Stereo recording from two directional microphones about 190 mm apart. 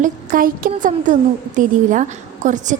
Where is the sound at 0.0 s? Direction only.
45° right (ahead or behind).